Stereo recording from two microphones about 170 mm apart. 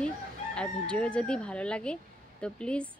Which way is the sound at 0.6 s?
5° left (ahead or behind).